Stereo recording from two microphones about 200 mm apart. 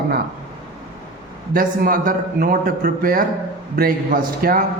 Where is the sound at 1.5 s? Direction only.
45° right (ahead or behind).